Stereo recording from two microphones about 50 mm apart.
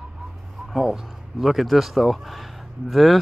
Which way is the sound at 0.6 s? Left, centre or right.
Centre.